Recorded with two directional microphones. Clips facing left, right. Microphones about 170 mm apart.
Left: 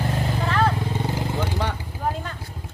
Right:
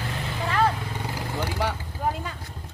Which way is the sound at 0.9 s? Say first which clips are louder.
Left 5 dB; 25° left (ahead or behind).